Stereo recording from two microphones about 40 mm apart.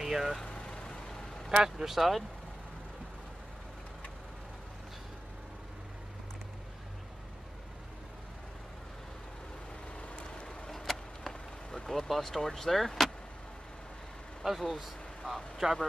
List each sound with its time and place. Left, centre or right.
0.0 s speech: centre
0.4 s vehicle: centre
1.5 s speech: centre
1.9 s speech: centre
10.0 s vehicle: left
10.7 s vehicle: centre
14.4 s speech: centre